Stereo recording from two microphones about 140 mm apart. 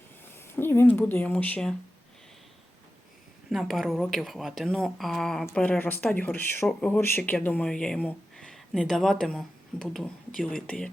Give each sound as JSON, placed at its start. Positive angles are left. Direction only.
{"t": 0.3, "sound": "a sound", "side_deg": 15}
{"t": 0.9, "sound": "speech", "side_deg": 10}
{"t": 3.5, "sound": "speech", "side_deg": 0}